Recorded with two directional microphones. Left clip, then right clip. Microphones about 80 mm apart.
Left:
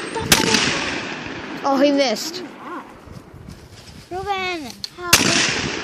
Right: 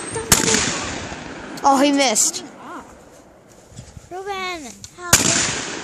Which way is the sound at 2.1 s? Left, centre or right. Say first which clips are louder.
Right 5 dB; centre.